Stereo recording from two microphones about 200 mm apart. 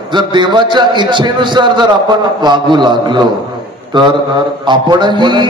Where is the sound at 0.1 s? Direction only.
25° right (ahead or behind).